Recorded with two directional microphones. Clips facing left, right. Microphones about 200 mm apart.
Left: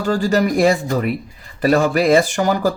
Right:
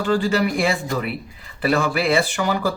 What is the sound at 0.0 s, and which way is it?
Speech, 40° left (ahead or behind).